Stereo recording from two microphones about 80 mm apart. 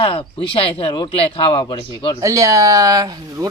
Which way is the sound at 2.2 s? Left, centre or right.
Right.